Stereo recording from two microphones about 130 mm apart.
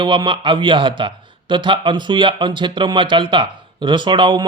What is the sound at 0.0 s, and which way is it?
Speech, 35° right (ahead or behind).